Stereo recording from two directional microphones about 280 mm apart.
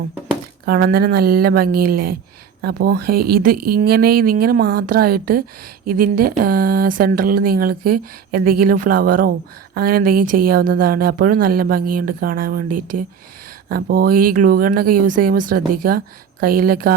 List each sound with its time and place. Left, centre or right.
0.6 s speech: right